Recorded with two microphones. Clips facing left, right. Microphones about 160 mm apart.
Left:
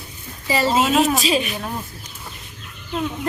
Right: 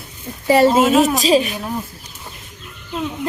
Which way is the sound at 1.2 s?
35° right (ahead or behind).